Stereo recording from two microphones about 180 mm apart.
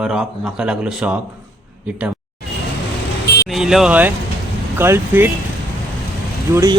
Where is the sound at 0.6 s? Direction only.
10° right (ahead or behind).